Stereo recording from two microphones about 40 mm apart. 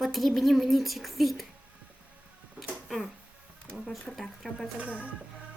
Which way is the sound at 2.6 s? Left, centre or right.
Centre.